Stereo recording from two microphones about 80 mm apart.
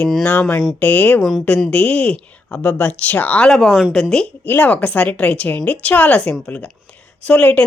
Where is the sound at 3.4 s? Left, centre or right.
Centre.